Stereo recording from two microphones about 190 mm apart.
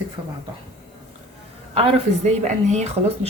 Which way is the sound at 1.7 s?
35° right (ahead or behind).